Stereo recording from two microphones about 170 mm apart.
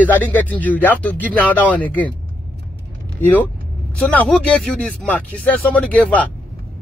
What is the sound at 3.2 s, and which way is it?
Speech, 10° left (ahead or behind).